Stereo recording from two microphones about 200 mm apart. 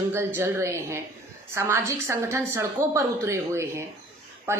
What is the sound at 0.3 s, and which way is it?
A woman's voice, 15° right (ahead or behind).